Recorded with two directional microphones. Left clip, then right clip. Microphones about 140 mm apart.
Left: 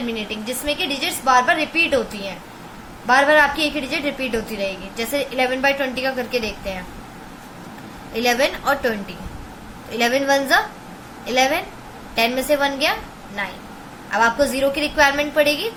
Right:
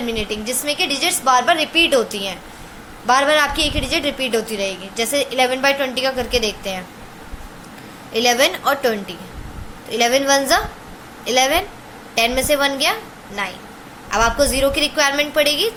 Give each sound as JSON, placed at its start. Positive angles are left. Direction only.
{"t": 0.1, "sound": "a woman's voice", "side_deg": -35}
{"t": 8.1, "sound": "a woman's voice", "side_deg": -40}